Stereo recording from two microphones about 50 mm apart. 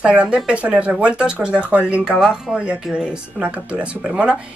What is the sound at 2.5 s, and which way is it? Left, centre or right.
Speech, right.